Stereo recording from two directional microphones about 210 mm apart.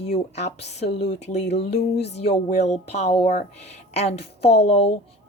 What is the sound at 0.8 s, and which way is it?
Speech, 30° left (ahead or behind).